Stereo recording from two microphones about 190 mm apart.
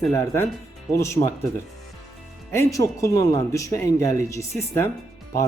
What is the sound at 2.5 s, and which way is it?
Speech, 15° left (ahead or behind).